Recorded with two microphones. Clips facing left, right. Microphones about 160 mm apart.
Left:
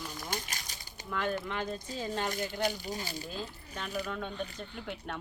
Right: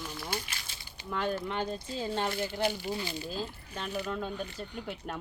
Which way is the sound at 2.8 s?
40° left (ahead or behind).